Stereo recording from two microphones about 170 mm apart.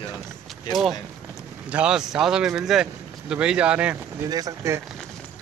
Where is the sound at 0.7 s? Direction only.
25° left (ahead or behind).